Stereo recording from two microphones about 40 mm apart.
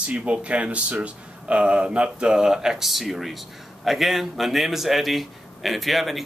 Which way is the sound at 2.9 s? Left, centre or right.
Centre.